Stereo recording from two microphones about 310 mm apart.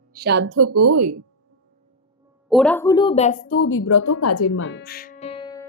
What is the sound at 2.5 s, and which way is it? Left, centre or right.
Speech, centre.